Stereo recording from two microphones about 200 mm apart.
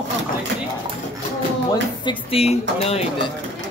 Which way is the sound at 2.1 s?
30° left (ahead or behind).